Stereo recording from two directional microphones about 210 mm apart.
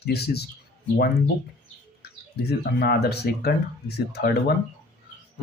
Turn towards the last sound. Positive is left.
turn(degrees=50)  # may be behind; listen again after turning